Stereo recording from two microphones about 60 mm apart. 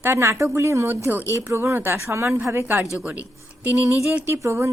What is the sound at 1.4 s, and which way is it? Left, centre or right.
Speech, right.